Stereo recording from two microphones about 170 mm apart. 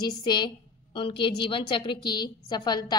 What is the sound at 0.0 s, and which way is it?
A woman's voice, 25° left (ahead or behind).